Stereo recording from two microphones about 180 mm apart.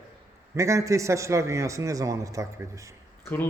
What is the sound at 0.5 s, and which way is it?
A man's voice, 15° right (ahead or behind).